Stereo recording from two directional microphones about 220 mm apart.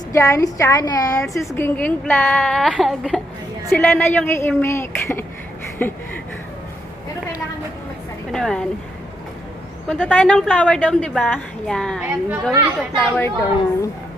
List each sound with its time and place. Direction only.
0.1 s a woman's voice: 15° left (ahead or behind)
8.3 s a woman's voice: centre (ahead or behind)
9.9 s a woman's voice: 5° left (ahead or behind)
13.0 s a woman's voice: 5° left (ahead or behind)